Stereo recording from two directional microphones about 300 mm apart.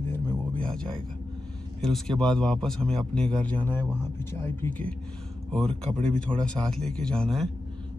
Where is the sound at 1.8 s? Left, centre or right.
Centre.